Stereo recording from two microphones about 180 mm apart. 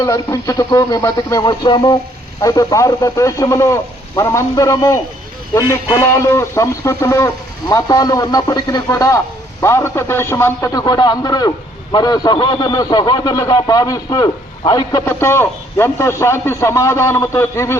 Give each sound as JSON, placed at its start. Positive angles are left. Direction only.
{"t": 0.0, "sound": "a man's voice", "side_deg": 20}